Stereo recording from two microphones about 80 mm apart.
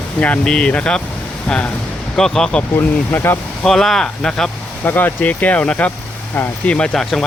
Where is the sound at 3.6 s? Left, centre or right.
Centre.